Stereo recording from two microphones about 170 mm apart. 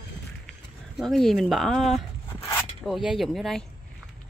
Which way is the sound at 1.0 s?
Centre (ahead or behind).